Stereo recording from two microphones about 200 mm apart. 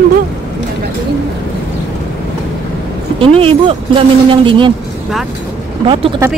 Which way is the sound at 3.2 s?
25° right (ahead or behind).